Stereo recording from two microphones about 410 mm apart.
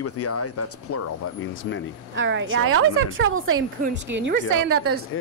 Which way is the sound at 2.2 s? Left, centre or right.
Right.